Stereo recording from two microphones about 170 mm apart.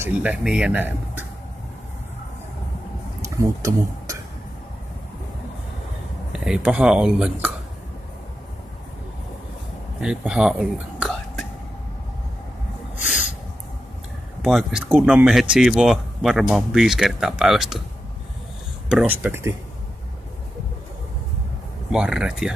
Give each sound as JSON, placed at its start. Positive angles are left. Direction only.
{"t": 0.0, "sound": "speech", "side_deg": -10}
{"t": 3.3, "sound": "speech", "side_deg": -20}
{"t": 6.3, "sound": "speech", "side_deg": -5}
{"t": 10.0, "sound": "speech", "side_deg": -5}
{"t": 11.0, "sound": "whispering", "side_deg": 0}
{"t": 14.4, "sound": "speech", "side_deg": 0}
{"t": 18.9, "sound": "speech", "side_deg": -10}
{"t": 21.9, "sound": "speech", "side_deg": -5}